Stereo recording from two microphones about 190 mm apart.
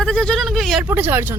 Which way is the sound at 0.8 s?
10° right (ahead or behind).